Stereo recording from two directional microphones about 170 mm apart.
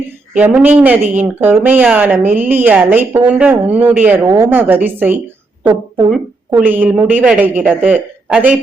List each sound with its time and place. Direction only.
0.3 s speech: 10° right (ahead or behind)
4.3 s a woman's voice: 20° right (ahead or behind)
6.7 s speech: 10° right (ahead or behind)